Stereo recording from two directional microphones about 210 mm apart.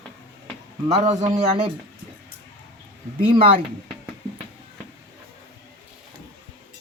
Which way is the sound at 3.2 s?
25° right (ahead or behind).